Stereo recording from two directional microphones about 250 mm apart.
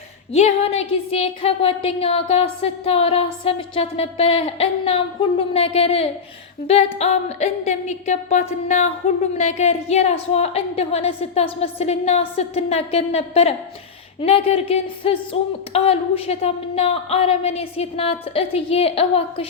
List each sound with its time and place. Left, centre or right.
0.3 s a woman's voice: left